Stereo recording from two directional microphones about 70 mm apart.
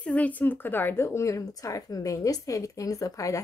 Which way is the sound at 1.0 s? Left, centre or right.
Left.